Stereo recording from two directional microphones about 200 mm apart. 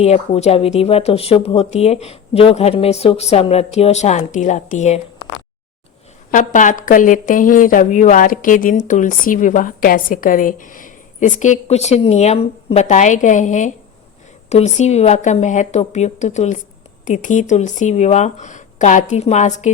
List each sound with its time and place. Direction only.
0.0 s a woman's voice: 30° left (ahead or behind)
6.3 s a woman's voice: 40° left (ahead or behind)